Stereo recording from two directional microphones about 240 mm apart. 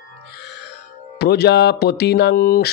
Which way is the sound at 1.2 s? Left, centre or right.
Left.